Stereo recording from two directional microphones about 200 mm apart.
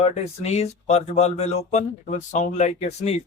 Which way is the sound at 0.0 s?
30° left (ahead or behind).